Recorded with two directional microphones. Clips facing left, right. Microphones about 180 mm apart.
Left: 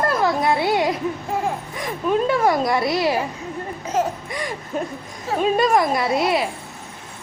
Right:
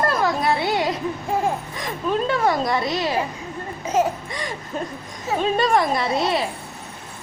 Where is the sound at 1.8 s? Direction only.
10° left (ahead or behind).